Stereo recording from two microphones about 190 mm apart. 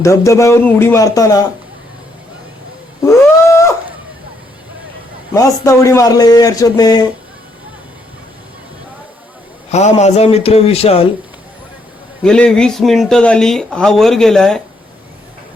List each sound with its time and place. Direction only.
0.0 s speech: 15° left (ahead or behind)
3.0 s cat: 15° left (ahead or behind)
5.3 s a man's voice: 15° left (ahead or behind)
9.7 s speech: 35° left (ahead or behind)
12.2 s speech: 5° left (ahead or behind)